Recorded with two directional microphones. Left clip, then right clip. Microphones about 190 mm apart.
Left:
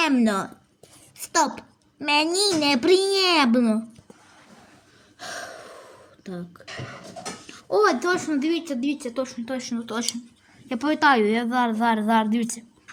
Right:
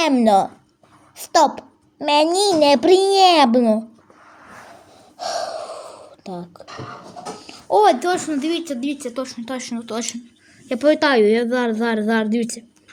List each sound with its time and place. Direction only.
0.0 s a child's voice: 5° left (ahead or behind)
5.1 s gasp: 5° right (ahead or behind)
7.8 s speech: 25° right (ahead or behind)
10.7 s a child's voice: 5° right (ahead or behind)